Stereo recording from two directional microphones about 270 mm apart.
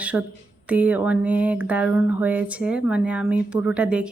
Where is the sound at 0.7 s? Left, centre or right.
Centre.